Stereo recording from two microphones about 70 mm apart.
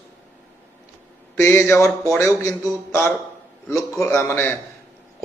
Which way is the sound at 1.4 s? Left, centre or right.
Left.